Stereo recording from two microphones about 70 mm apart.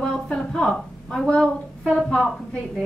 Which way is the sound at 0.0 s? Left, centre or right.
Centre.